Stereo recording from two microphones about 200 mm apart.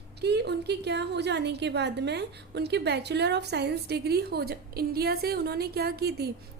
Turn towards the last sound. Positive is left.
turn(degrees=-50)  # may be behind; listen again after turning